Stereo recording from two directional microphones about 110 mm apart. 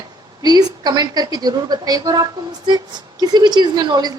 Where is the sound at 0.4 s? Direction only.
40° right (ahead or behind).